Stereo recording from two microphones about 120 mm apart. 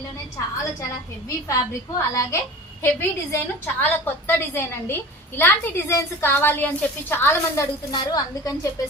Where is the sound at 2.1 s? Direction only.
25° left (ahead or behind).